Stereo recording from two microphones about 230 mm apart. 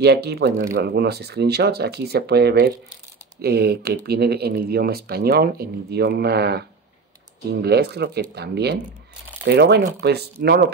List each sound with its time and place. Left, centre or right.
0.0 s speech: right
7.6 s speech: right